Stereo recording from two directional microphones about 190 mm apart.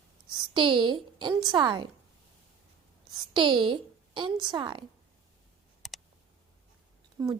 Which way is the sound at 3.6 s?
25° right (ahead or behind).